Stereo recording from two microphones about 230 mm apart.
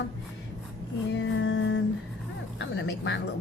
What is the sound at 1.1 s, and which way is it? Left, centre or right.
Speech, left.